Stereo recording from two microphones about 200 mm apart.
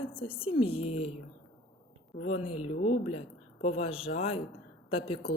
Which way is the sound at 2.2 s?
30° left (ahead or behind).